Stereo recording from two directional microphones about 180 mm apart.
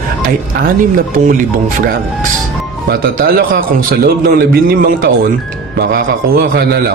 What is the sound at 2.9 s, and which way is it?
Speech, 55° right (ahead or behind).